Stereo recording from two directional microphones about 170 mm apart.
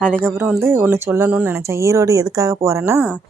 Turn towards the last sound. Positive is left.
turn(degrees=-15)  # may be behind; listen again after turning